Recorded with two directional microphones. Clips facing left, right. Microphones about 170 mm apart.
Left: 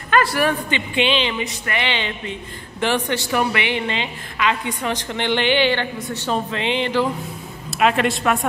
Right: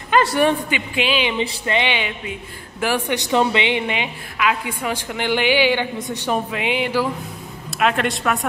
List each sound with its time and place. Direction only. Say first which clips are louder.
0.7 s a woman's voice: left 1 dB; 5° right (ahead or behind)
1.4 s music: right 4 dB; 30° right (ahead or behind)
1.8 s a woman's voice: even; 15° right (ahead or behind)